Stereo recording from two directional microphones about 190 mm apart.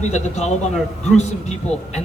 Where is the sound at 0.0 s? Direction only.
35° left (ahead or behind).